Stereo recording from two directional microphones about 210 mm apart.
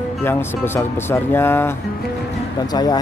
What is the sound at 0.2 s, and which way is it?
Speech, 10° left (ahead or behind).